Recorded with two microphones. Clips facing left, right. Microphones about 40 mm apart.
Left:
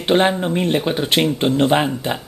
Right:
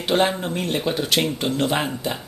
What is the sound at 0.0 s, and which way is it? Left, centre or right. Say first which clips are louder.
Speech: left 4 dB; left.